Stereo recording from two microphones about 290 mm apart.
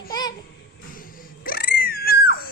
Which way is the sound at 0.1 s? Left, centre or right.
Centre.